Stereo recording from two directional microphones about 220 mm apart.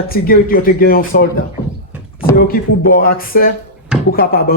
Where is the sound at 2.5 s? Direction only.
45° left (ahead or behind).